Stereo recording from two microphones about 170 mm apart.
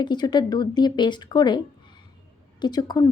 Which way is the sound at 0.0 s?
25° left (ahead or behind).